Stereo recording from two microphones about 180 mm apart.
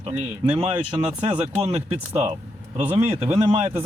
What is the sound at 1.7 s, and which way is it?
Speech, 35° right (ahead or behind).